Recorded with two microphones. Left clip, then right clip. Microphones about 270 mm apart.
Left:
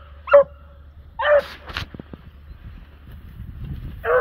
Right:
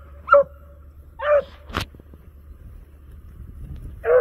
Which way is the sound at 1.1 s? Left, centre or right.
Centre.